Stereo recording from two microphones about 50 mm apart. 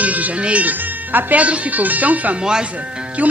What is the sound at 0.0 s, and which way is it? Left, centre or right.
Speech, right.